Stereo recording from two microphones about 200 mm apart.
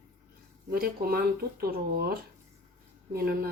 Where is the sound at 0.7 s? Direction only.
50° right (ahead or behind).